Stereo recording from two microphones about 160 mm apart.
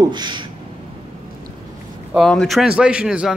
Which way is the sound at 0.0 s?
25° right (ahead or behind).